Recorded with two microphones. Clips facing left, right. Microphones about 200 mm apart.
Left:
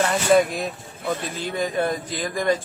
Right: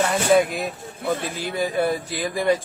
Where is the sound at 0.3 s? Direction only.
Centre (ahead or behind).